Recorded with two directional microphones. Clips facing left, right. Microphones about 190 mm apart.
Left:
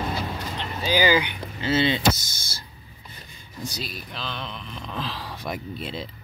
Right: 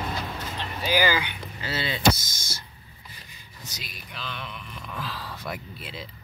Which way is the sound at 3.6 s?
30° left (ahead or behind).